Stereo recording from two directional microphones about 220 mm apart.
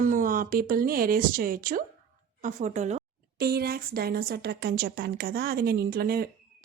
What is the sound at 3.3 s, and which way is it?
A woman's voice, 45° right (ahead or behind).